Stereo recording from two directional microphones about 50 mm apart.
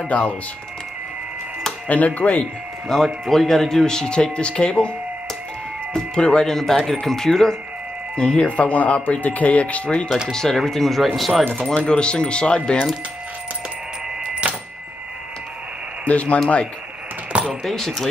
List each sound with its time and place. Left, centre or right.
0.0 s speech: left
1.9 s speech: left
2.9 s speech: centre
6.1 s speech: centre
8.5 s speech: left
10.3 s speech: centre
11.7 s speech: left
14.2 s a sound: centre
16.1 s speech: left
17.5 s speech: centre